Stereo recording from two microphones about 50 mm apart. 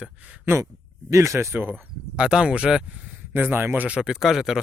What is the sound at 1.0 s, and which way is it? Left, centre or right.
Speech, right.